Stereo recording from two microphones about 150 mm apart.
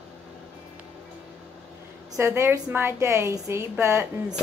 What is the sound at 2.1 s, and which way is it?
A woman's voice, 20° right (ahead or behind).